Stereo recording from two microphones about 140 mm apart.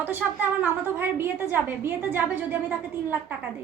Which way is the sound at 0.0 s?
15° right (ahead or behind).